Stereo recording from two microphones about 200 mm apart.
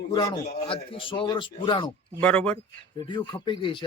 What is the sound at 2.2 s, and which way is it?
Speech, 5° left (ahead or behind).